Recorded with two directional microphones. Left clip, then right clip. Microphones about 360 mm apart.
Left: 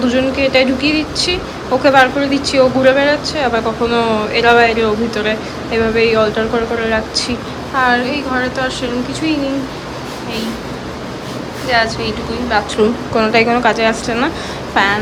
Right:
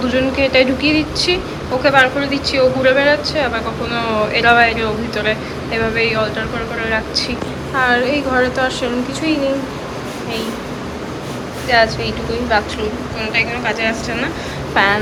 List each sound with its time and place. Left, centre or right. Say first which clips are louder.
0.0 s a woman's voice: left 2 dB; centre
11.7 s a woman's voice: right 1 dB; centre